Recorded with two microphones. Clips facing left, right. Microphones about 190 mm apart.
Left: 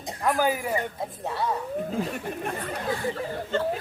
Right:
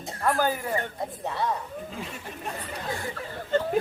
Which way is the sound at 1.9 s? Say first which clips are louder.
Left 8 dB; 55° left (ahead or behind).